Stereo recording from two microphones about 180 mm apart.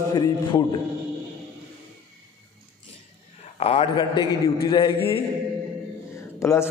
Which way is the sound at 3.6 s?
30° left (ahead or behind).